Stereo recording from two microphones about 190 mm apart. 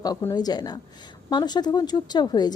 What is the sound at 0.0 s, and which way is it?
A woman's voice, 15° left (ahead or behind).